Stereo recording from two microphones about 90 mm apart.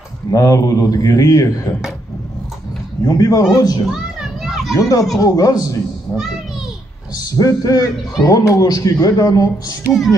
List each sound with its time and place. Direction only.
0.3 s a man's voice: 40° left (ahead or behind)
3.1 s a man's voice: 40° left (ahead or behind)
3.9 s children playing: 5° right (ahead or behind)
4.7 s a man's voice: 40° left (ahead or behind)
7.2 s a man's voice: 40° left (ahead or behind)